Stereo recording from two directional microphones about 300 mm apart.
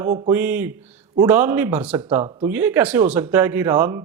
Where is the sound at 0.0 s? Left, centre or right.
Centre.